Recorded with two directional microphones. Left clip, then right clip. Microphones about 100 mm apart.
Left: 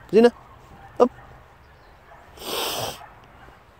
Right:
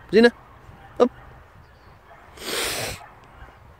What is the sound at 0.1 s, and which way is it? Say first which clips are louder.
Speech: even; 15° right (ahead or behind).